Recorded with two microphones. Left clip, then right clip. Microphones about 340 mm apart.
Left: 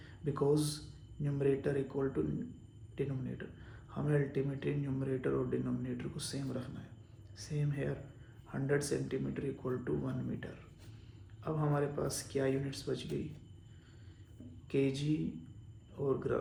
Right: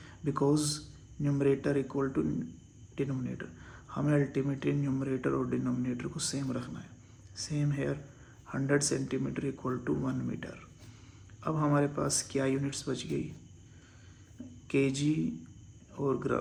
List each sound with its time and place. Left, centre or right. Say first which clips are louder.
0.0 s a sound: right 4 dB; right
0.5 s speech: right 3 dB; right
14.7 s speech: right 4 dB; right
16.0 s speech: right 3 dB; right